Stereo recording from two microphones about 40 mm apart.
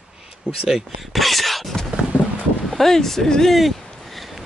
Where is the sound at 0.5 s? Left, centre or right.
Right.